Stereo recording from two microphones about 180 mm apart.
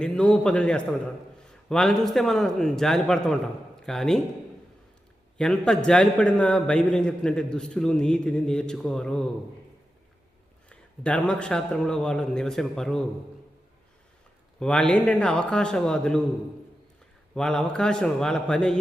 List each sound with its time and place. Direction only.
0.0 s a man's voice: 5° left (ahead or behind)
5.4 s a man's voice: 5° left (ahead or behind)
10.7 s a man's voice: 5° left (ahead or behind)
14.6 s a man's voice: 5° left (ahead or behind)
17.3 s a man's voice: 5° left (ahead or behind)